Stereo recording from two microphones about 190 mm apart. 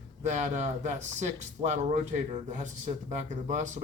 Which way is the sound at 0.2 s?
40° right (ahead or behind).